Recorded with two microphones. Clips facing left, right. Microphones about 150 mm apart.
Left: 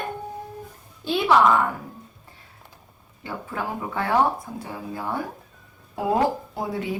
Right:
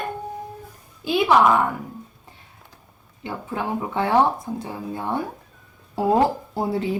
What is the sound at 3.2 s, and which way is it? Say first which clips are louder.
A woman's voice: right 3 dB; 20° right (ahead or behind).